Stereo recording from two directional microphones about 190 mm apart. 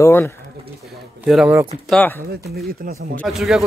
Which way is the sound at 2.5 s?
55° right (ahead or behind).